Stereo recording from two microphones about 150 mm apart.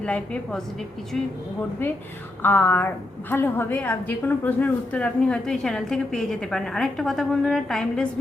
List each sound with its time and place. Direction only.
0.0 s a woman's voice: 5° left (ahead or behind)
2.4 s a woman's voice: 15° left (ahead or behind)